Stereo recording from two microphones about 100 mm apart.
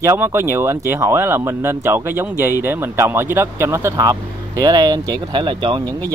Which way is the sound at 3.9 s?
40° right (ahead or behind).